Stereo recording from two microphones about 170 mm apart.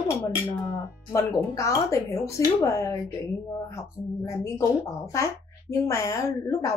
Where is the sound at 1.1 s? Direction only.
20° left (ahead or behind).